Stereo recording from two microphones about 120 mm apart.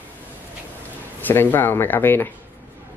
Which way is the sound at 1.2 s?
15° left (ahead or behind).